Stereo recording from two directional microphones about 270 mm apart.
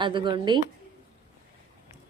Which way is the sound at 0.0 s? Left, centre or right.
Centre.